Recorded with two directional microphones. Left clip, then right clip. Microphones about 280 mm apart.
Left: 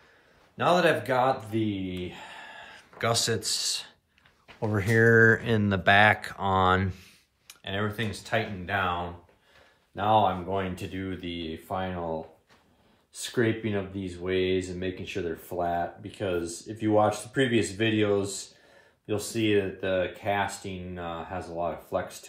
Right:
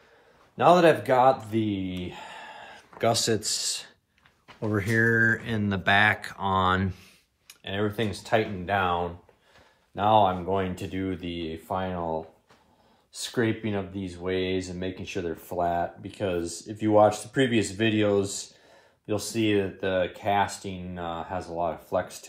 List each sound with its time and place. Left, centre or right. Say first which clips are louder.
0.6 s speech: right 4 dB; centre
3.0 s speech: right 2 dB; centre
9.9 s speech: right 2 dB; centre